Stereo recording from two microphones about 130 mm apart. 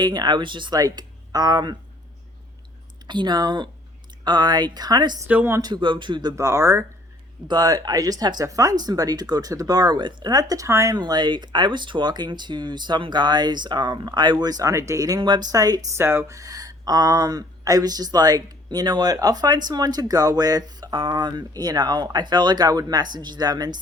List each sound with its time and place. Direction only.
0.0 s speech: 35° right (ahead or behind)
3.1 s speech: 35° right (ahead or behind)
5.3 s speech: 15° right (ahead or behind)
5.6 s speech: 35° right (ahead or behind)
6.3 s speech: 20° right (ahead or behind)
10.9 s speech: 35° right (ahead or behind)
16.0 s speech: 20° right (ahead or behind)